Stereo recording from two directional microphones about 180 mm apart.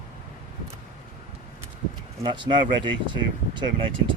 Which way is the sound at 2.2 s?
25° right (ahead or behind).